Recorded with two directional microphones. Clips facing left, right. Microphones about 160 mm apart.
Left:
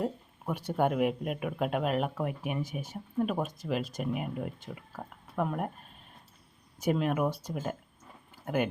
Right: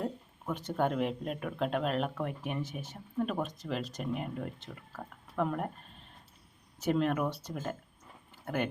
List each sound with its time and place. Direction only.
0.0 s speech: 10° left (ahead or behind)
6.7 s speech: 10° left (ahead or behind)